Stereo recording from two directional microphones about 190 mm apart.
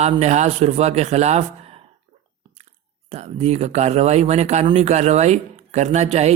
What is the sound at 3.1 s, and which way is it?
A man's voice, 35° right (ahead or behind).